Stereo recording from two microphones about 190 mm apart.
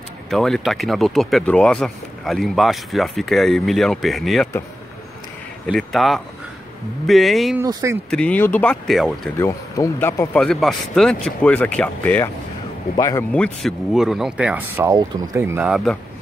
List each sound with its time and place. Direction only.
0.3 s speech: centre (ahead or behind)
5.7 s speech: centre (ahead or behind)
7.5 s speech: 15° right (ahead or behind)
8.1 s speech: 5° left (ahead or behind)
9.4 s speech: 15° left (ahead or behind)
13.3 s speech: 5° left (ahead or behind)
14.9 s speech: 20° right (ahead or behind); by 16.0 s centre (ahead or behind)